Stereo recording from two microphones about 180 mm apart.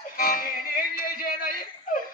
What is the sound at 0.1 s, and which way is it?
Music, 55° left (ahead or behind).